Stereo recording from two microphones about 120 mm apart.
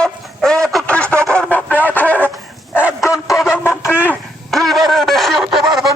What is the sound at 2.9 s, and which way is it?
Bow-wow, 25° left (ahead or behind).